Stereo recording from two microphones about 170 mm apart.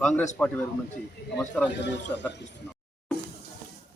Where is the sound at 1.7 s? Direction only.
90° left.